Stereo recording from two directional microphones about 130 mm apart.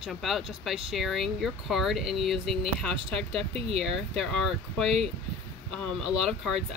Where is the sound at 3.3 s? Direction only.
50° right (ahead or behind).